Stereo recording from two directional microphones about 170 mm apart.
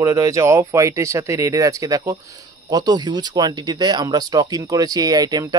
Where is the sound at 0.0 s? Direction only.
20° right (ahead or behind).